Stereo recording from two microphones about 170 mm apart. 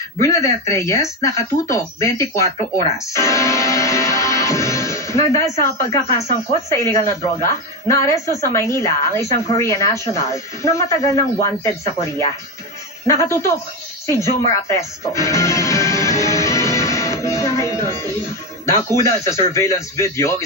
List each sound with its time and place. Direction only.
0.2 s speech: 20° left (ahead or behind)
13.0 s a woman's voice: 20° left (ahead or behind)
14.7 s music: 20° left (ahead or behind)
18.7 s speech: 20° left (ahead or behind)